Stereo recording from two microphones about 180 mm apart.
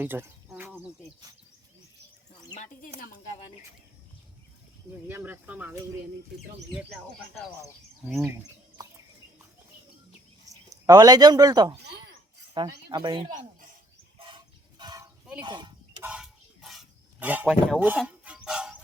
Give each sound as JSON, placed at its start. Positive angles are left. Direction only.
{"t": 0.0, "sound": "speech", "side_deg": -10}
{"t": 0.4, "sound": "a sound", "side_deg": -10}
{"t": 5.0, "sound": "speech", "side_deg": -10}
{"t": 10.5, "sound": "speech", "side_deg": -20}
{"t": 11.9, "sound": "a sound", "side_deg": -65}
{"t": 12.6, "sound": "speech", "side_deg": -25}
{"t": 14.2, "sound": "chicken", "side_deg": -30}
{"t": 15.4, "sound": "speech", "side_deg": -25}
{"t": 16.0, "sound": "a sound", "side_deg": -5}
{"t": 18.0, "sound": "chicken", "side_deg": -5}